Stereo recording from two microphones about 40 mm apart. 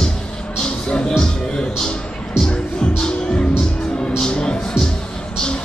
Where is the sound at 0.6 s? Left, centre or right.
Left.